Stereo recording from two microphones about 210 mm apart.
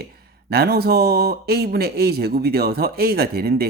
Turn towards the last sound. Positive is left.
turn(degrees=-50)  # may be behind; listen again after turning